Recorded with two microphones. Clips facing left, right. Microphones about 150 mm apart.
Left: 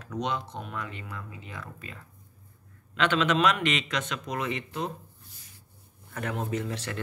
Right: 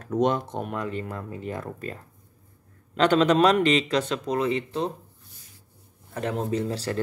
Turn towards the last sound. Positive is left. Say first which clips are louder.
# right 5 dB
turn(degrees=-30)  # may be behind; listen again after turning